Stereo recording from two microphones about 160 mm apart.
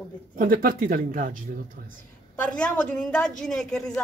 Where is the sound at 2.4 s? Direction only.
5° left (ahead or behind).